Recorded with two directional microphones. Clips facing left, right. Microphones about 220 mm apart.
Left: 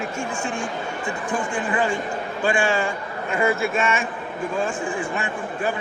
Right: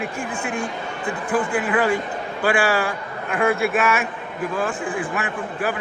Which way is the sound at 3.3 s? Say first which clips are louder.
Right 1 dB; centre (ahead or behind).